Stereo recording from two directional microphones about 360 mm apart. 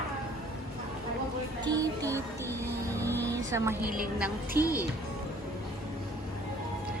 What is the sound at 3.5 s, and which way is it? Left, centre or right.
Speech, centre.